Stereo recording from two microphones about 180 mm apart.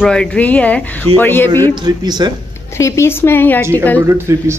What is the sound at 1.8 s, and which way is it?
Speech, 25° right (ahead or behind).